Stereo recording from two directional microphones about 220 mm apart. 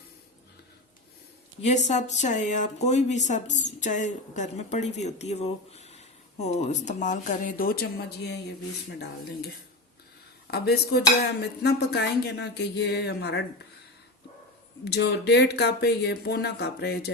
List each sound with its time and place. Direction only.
1.6 s speech: 30° left (ahead or behind); by 8.5 s 50° left (ahead or behind)
10.5 s speech: 45° left (ahead or behind)
14.8 s speech: 50° left (ahead or behind)